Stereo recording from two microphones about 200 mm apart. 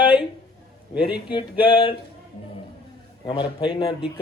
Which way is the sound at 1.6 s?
25° left (ahead or behind).